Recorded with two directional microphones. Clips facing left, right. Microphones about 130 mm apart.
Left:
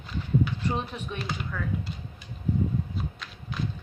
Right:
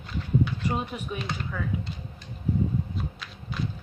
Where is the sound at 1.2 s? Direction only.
5° left (ahead or behind).